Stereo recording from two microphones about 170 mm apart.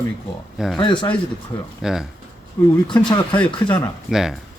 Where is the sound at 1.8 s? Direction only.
5° right (ahead or behind).